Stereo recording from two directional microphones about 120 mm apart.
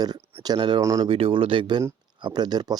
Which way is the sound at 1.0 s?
50° right (ahead or behind).